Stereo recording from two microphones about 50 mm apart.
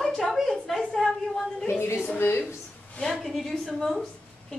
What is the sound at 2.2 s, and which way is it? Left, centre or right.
Speech, left.